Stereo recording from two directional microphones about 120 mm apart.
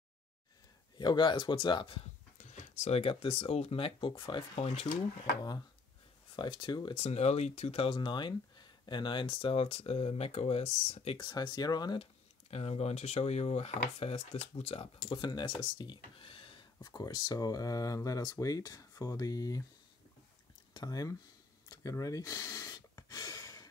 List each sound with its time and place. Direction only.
0.9 s speech: 40° left (ahead or behind)
2.3 s a sound: 85° left
3.0 s speech: 50° left (ahead or behind)
4.6 s speech: 60° left (ahead or behind)
6.3 s speech: 40° left (ahead or behind)
7.0 s speech: 65° left (ahead or behind)
11.1 s speech: 40° left (ahead or behind)
12.0 s speech: 55° left (ahead or behind); by 19.6 s 30° left (ahead or behind)
20.7 s speech: 30° left (ahead or behind)
21.6 s a sound: 30° left (ahead or behind)